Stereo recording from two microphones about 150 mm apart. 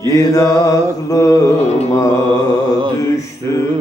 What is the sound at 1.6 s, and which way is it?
Carnatic music, 45° left (ahead or behind).